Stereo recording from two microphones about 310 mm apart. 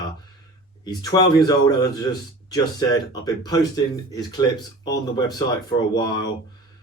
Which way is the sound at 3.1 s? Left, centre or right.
Centre.